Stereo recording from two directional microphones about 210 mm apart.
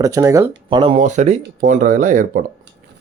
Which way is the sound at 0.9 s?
35° right (ahead or behind).